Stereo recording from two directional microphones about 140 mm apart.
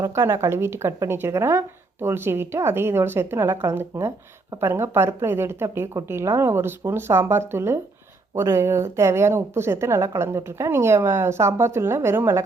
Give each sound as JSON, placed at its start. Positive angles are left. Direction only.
{"t": 0.0, "sound": "a woman's voice", "side_deg": -20}